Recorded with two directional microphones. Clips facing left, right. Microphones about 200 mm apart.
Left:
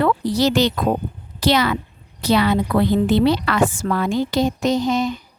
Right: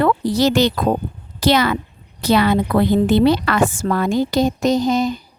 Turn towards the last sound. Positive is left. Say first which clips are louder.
# right 2 dB
turn(degrees=-40)  # may be behind; listen again after turning